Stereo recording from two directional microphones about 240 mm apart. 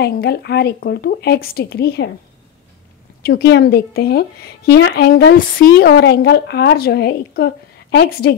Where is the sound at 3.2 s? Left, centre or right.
Left.